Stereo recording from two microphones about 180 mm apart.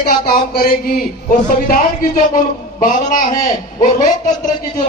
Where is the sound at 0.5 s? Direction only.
55° left (ahead or behind).